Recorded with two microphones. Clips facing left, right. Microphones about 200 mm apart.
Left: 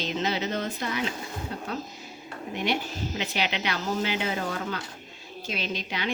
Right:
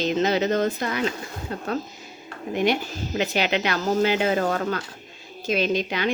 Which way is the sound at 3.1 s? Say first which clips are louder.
Right 8 dB; 50° right (ahead or behind).